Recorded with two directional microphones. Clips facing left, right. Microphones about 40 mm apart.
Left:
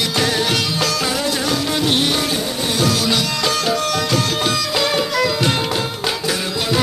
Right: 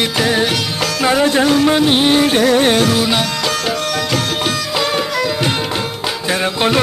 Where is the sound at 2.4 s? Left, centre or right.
Right.